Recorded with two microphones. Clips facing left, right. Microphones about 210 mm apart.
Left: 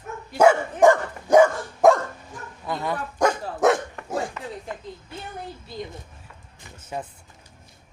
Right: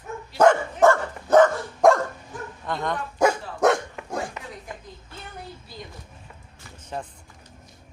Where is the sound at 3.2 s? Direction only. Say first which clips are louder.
Even; centre (ahead or behind).